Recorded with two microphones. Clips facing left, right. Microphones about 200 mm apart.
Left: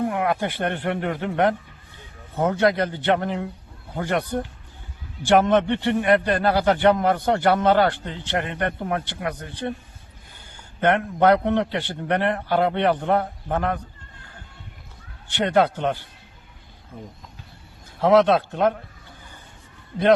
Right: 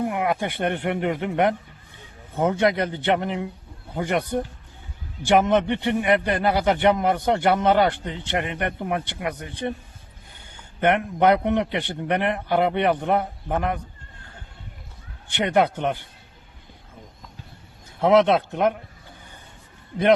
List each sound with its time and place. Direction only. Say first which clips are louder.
0.1 s a man's voice: left 1 dB; 15° right (ahead or behind)
5.2 s a man's voice: left 1 dB; 15° right (ahead or behind)
10.8 s a man's voice: even; 15° right (ahead or behind)
15.3 s a man's voice: left 1 dB; 15° right (ahead or behind)
18.0 s a man's voice: left 1 dB; 20° right (ahead or behind)